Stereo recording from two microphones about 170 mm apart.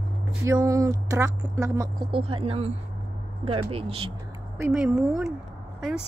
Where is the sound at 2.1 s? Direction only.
35° right (ahead or behind).